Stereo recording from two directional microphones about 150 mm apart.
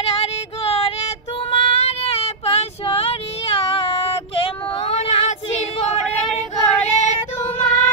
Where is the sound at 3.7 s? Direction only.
40° left (ahead or behind).